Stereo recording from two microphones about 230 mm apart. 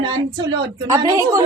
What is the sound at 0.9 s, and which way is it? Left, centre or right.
Speech, centre.